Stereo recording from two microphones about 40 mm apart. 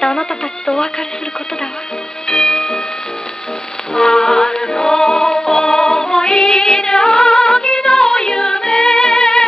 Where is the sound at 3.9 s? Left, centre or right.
Centre.